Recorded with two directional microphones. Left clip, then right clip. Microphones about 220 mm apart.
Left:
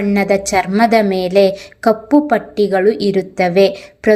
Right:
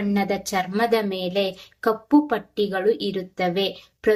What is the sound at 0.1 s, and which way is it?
A woman's voice, 40° left (ahead or behind).